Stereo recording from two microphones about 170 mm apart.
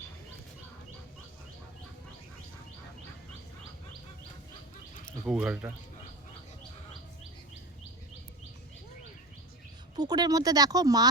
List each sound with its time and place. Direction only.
5.2 s speech: 5° right (ahead or behind)
9.9 s speech: 25° right (ahead or behind)